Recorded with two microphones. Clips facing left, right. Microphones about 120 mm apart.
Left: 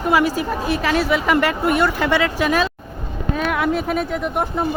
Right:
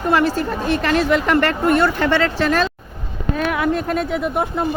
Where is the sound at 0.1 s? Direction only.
10° left (ahead or behind).